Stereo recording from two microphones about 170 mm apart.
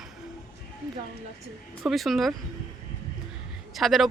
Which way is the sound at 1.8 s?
Centre (ahead or behind).